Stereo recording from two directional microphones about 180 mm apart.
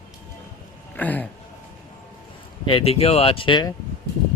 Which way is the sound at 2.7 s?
30° left (ahead or behind).